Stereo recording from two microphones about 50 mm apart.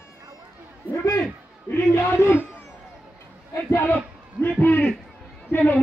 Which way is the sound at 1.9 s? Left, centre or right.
Left.